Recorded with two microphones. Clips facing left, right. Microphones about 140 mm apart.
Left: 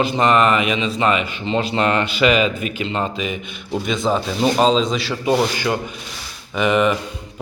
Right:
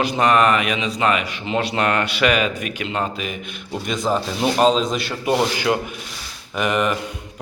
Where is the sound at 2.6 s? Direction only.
75° right (ahead or behind).